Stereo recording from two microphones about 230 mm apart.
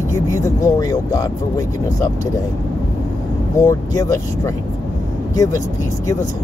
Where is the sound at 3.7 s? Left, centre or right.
Centre.